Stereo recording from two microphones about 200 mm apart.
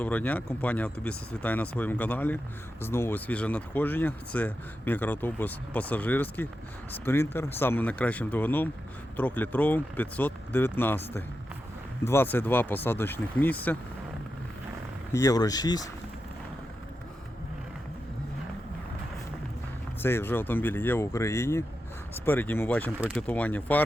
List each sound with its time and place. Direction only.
0.0 s speech: 10° left (ahead or behind)
15.1 s speech: 15° left (ahead or behind)
20.0 s speech: 10° left (ahead or behind)